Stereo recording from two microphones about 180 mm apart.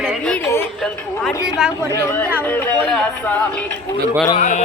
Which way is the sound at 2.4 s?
10° left (ahead or behind).